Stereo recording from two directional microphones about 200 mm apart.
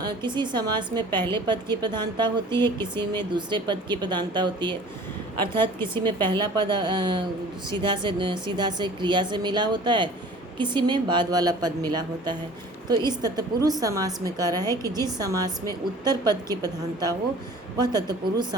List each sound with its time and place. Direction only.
0.0 s a woman's voice: 20° right (ahead or behind)
6.0 s a woman's voice: 20° right (ahead or behind)